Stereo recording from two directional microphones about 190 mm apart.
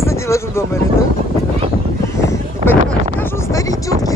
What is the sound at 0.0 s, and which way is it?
Speech, 15° left (ahead or behind).